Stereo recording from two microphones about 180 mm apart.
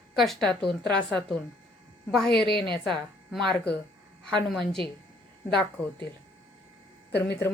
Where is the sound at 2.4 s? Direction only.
65° left (ahead or behind).